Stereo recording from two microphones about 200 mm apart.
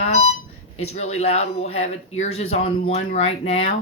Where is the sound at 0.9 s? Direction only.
30° left (ahead or behind).